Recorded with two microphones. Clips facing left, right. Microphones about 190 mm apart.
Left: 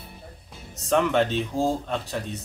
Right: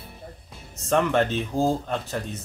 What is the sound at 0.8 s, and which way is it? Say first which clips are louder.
Speech: even; centre (ahead or behind).